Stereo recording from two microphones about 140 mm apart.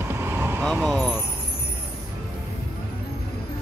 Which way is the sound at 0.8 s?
5° left (ahead or behind).